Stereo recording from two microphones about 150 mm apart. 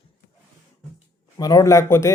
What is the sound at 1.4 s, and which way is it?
Speech, 25° left (ahead or behind).